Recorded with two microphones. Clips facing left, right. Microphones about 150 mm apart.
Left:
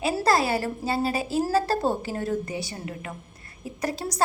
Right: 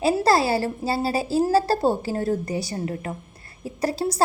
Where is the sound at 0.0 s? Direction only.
30° right (ahead or behind).